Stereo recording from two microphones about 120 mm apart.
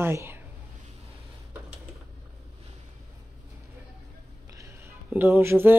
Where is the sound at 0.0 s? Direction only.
20° right (ahead or behind).